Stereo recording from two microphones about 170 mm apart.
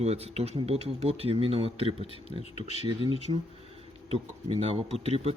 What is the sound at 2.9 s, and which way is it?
Speech, 30° right (ahead or behind).